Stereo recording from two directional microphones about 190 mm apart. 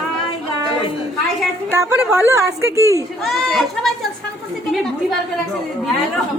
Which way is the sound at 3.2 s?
Centre (ahead or behind).